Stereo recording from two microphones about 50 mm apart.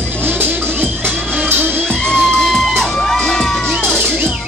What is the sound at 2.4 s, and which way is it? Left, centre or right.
Crowd, centre.